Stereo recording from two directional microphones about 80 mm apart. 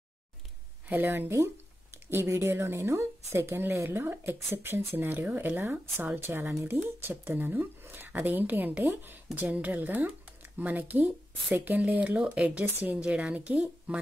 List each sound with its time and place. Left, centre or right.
0.8 s a woman's voice: right